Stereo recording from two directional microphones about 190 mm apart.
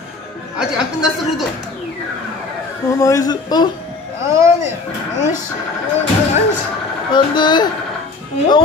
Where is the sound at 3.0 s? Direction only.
20° left (ahead or behind).